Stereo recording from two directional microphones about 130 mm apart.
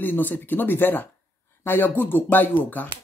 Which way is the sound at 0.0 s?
15° left (ahead or behind).